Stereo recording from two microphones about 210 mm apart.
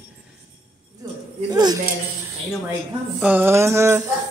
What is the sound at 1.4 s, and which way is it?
Speech, 20° right (ahead or behind).